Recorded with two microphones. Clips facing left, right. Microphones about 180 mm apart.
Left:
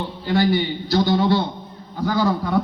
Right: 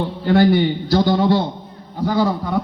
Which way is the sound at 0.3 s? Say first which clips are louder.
Right 5 dB; 55° right (ahead or behind).